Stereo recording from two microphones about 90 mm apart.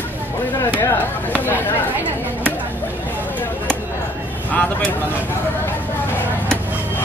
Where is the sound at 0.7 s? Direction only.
20° left (ahead or behind).